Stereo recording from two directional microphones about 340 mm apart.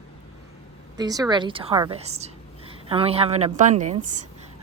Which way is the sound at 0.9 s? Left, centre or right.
Centre.